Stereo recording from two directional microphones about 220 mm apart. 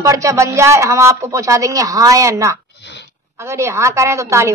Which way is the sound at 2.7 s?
50° left (ahead or behind).